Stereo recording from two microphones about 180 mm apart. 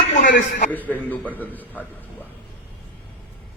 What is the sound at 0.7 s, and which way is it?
A man's voice, 10° left (ahead or behind).